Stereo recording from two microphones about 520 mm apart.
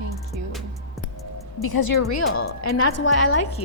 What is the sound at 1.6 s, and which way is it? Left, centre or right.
Speech, left.